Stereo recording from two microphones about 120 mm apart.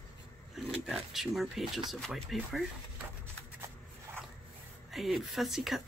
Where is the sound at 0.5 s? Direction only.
Centre (ahead or behind).